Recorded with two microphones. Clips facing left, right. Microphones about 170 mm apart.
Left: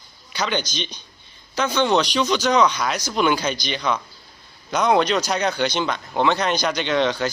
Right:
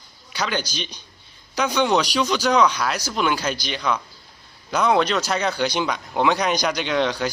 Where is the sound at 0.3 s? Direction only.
5° right (ahead or behind).